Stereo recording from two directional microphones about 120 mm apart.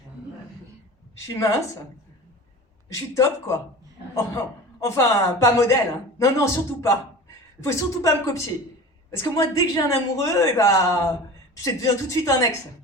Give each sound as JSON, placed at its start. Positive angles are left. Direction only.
{"t": 1.1, "sound": "a woman's voice", "side_deg": 25}
{"t": 2.9, "sound": "a woman's voice", "side_deg": 25}
{"t": 4.8, "sound": "a woman's voice", "side_deg": 25}